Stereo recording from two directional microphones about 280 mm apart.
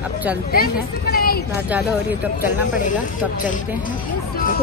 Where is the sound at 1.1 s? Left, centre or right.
Left.